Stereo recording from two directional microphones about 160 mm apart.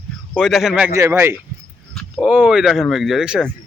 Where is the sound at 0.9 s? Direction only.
15° right (ahead or behind).